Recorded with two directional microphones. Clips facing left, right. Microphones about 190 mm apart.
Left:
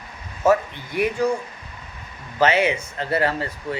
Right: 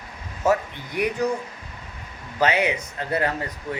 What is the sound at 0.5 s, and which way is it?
Speech, 20° right (ahead or behind).